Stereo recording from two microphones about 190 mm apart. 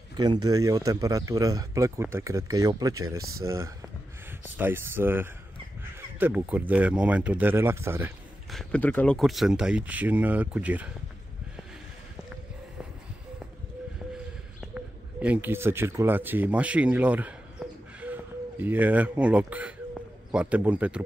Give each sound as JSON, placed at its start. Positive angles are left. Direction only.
{"t": 0.2, "sound": "speech", "side_deg": -20}
{"t": 5.9, "sound": "crow", "side_deg": -10}
{"t": 6.7, "sound": "speech", "side_deg": -5}
{"t": 8.5, "sound": "speech", "side_deg": 5}
{"t": 14.7, "sound": "speech", "side_deg": -5}